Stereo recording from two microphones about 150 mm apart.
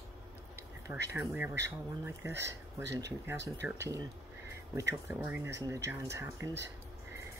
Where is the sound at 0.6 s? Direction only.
20° right (ahead or behind).